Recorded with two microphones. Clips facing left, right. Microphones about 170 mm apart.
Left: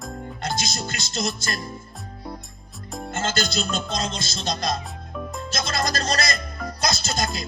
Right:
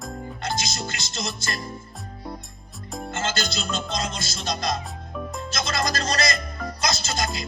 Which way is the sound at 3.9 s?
25° left (ahead or behind).